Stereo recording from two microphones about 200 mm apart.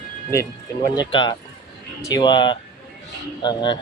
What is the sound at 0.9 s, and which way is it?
Speech, 20° left (ahead or behind).